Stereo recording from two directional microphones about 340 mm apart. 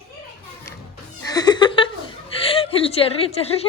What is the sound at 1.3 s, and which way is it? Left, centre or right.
Cat, centre.